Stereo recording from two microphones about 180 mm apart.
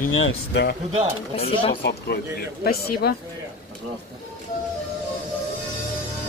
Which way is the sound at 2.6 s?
60° left (ahead or behind).